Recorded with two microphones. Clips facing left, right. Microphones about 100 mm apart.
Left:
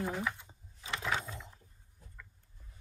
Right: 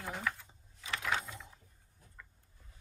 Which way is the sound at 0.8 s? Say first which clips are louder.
Even; 30° left (ahead or behind).